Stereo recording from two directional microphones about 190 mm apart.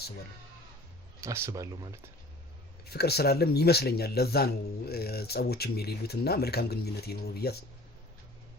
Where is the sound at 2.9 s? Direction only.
55° left (ahead or behind).